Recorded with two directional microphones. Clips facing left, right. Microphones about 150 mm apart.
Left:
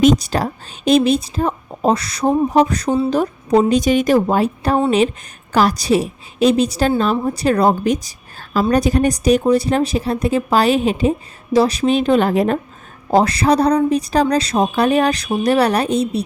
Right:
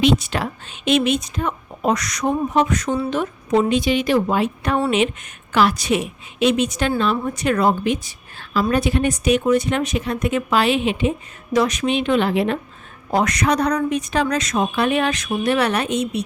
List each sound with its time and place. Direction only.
0.0 s speech: 40° left (ahead or behind)
13.1 s speech: 30° left (ahead or behind)